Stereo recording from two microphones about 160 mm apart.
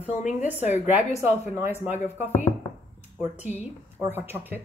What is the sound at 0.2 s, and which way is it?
Speech, 50° left (ahead or behind).